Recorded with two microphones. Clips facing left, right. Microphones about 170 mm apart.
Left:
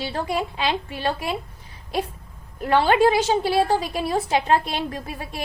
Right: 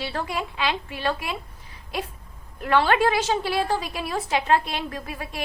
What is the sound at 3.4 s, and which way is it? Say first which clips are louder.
A child's voice: left 4 dB; 35° left (ahead or behind).